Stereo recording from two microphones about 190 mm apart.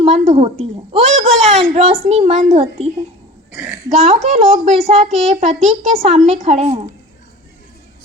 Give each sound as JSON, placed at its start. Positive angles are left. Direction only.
{"t": 0.0, "sound": "a woman's voice", "side_deg": -35}
{"t": 3.5, "sound": "speech", "side_deg": -10}
{"t": 3.8, "sound": "a woman's voice", "side_deg": -35}